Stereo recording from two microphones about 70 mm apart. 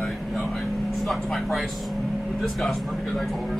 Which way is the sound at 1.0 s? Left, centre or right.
Centre.